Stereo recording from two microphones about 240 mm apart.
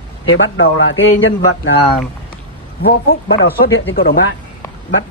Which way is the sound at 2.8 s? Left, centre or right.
Left.